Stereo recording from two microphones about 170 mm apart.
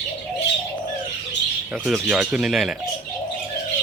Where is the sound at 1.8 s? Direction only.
5° right (ahead or behind).